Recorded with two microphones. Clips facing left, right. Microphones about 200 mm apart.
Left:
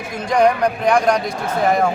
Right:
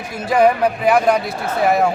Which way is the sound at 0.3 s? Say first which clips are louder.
Right 1 dB; 5° right (ahead or behind).